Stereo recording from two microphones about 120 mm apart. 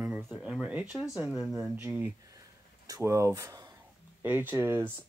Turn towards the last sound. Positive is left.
turn(degrees=-20)  # may be behind; listen again after turning